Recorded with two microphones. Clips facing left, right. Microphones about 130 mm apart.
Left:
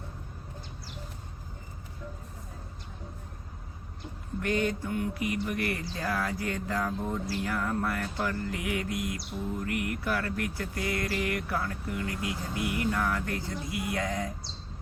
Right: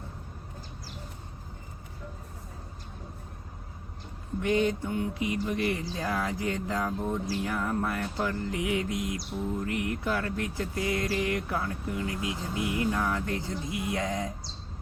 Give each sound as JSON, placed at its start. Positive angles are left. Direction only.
{"t": 4.4, "sound": "speech", "side_deg": -20}